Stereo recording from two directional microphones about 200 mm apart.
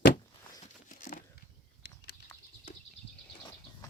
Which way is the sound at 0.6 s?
45° left (ahead or behind).